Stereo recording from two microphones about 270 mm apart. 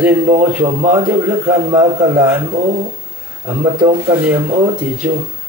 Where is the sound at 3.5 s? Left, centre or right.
Centre.